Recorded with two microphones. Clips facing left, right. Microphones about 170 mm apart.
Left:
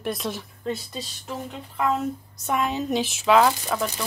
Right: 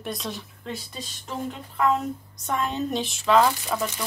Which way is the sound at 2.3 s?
5° left (ahead or behind).